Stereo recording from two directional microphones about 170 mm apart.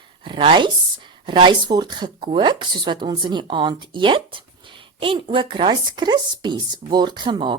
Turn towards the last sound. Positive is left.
turn(degrees=-25)  # may be behind; listen again after turning